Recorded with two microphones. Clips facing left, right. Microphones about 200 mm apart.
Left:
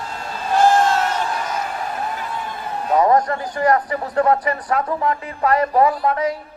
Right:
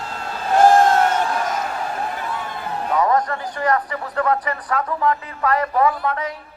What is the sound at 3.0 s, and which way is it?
A man's voice, 30° left (ahead or behind).